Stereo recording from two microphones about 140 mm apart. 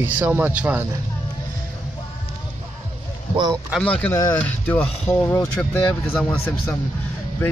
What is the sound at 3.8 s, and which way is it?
Speech, 10° left (ahead or behind).